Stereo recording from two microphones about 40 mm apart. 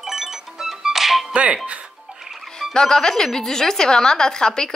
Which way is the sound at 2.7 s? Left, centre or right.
Centre.